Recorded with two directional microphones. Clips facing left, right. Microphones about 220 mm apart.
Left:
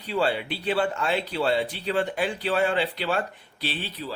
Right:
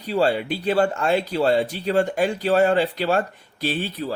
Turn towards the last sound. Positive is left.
turn(degrees=-50)  # may be behind; listen again after turning